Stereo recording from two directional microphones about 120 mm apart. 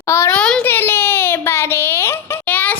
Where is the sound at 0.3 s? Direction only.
10° left (ahead or behind).